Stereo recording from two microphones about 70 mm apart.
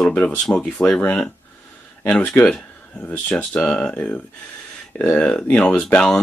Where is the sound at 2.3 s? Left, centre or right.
Left.